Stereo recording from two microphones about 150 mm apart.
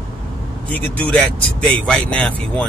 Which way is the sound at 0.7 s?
5° left (ahead or behind).